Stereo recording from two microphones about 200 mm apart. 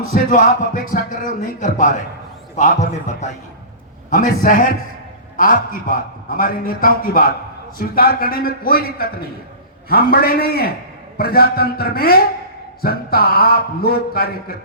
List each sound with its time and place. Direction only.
0.1 s speech: 40° left (ahead or behind)
4.1 s a man's voice: 40° left (ahead or behind)